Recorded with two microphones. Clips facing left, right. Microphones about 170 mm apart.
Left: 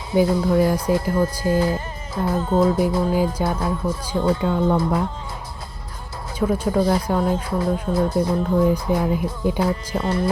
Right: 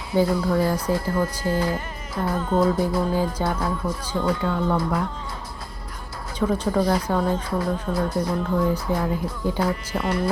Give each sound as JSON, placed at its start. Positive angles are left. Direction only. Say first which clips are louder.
{"t": 0.1, "sound": "speech", "louder": "left 3 dB", "side_deg": 20}
{"t": 1.5, "sound": "speech", "louder": "left 4 dB", "side_deg": 25}
{"t": 4.2, "sound": "speech", "louder": "left 4 dB", "side_deg": 25}
{"t": 6.4, "sound": "speech", "louder": "left 2 dB", "side_deg": 10}
{"t": 7.6, "sound": "speech", "louder": "left 4 dB", "side_deg": 20}